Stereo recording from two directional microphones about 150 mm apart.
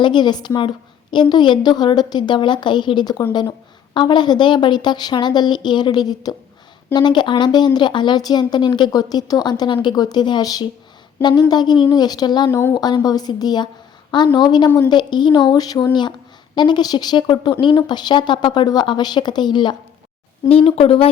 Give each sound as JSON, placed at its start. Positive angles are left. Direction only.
{"t": 0.0, "sound": "speech", "side_deg": 30}
{"t": 12.5, "sound": "speech", "side_deg": 15}
{"t": 12.7, "sound": "speech", "side_deg": 25}
{"t": 20.5, "sound": "speech", "side_deg": 40}